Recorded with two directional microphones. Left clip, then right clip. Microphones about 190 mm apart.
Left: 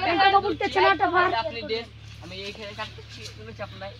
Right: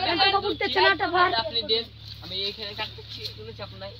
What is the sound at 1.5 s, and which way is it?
Speech, 5° right (ahead or behind).